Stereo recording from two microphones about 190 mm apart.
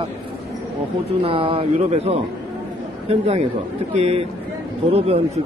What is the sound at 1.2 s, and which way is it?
A man's voice, 30° right (ahead or behind).